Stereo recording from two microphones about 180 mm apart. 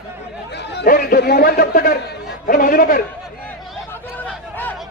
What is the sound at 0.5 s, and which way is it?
A man's voice, 70° left (ahead or behind).